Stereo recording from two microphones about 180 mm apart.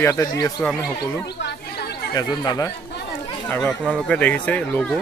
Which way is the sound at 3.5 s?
5° left (ahead or behind).